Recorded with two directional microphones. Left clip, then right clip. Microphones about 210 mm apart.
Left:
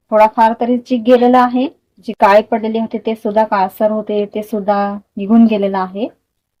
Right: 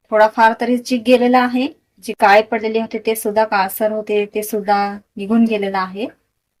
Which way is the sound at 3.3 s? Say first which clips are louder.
Left 3 dB; 35° left (ahead or behind).